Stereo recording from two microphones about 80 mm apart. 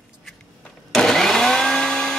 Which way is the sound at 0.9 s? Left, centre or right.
Centre.